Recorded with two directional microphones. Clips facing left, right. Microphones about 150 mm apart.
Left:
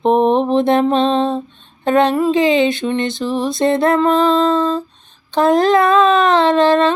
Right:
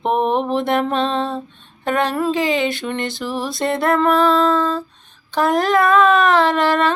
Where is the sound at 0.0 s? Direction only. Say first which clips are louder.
Left 5 dB; 25° left (ahead or behind).